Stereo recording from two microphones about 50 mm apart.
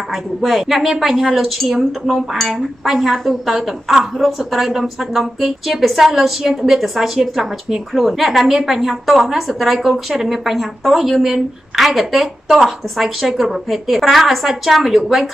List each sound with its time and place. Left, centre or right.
0.1 s a woman's voice: centre